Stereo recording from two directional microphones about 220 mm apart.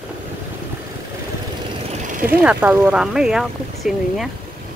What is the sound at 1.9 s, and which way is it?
Vehicle, 35° right (ahead or behind).